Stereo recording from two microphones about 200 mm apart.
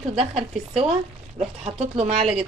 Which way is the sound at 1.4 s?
30° right (ahead or behind).